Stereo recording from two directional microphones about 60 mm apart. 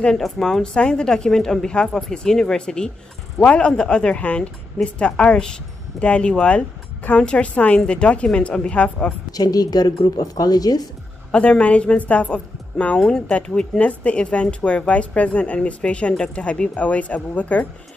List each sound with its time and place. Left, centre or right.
0.2 s speech: centre
9.3 s a woman's voice: left
11.3 s a woman's voice: centre